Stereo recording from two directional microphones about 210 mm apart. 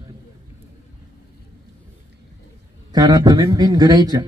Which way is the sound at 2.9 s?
20° right (ahead or behind).